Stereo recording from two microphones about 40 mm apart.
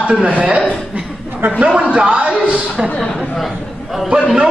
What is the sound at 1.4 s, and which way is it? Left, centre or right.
Speech, right.